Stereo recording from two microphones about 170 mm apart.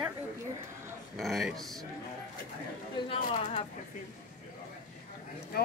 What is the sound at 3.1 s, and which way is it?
Speech, 35° left (ahead or behind).